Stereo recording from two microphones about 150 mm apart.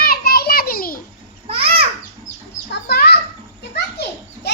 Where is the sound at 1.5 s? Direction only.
40° right (ahead or behind).